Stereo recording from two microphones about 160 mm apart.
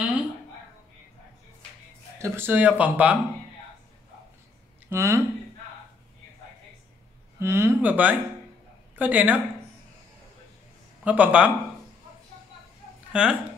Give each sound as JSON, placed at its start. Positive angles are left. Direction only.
{"t": 2.1, "sound": "speech", "side_deg": -15}
{"t": 4.8, "sound": "speech", "side_deg": -15}
{"t": 7.3, "sound": "speech", "side_deg": -15}
{"t": 11.1, "sound": "speech", "side_deg": -10}
{"t": 13.1, "sound": "speech", "side_deg": -5}